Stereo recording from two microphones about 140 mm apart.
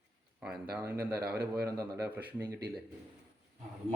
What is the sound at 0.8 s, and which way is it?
A man's voice, 15° right (ahead or behind).